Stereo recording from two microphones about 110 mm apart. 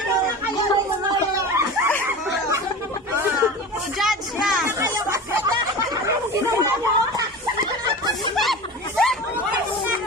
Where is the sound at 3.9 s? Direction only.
Centre (ahead or behind).